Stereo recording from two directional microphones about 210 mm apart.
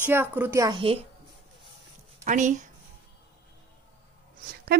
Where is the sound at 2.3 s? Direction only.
35° right (ahead or behind).